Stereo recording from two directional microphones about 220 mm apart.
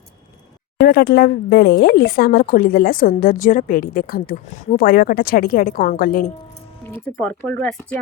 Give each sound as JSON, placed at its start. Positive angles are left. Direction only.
{"t": 0.8, "sound": "speech", "side_deg": 45}
{"t": 6.9, "sound": "speech", "side_deg": 5}